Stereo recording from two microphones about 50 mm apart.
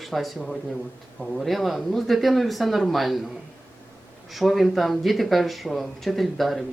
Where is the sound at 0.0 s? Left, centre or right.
Centre.